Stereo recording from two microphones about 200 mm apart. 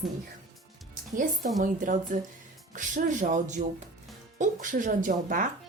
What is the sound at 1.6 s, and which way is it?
A woman's voice, 40° right (ahead or behind).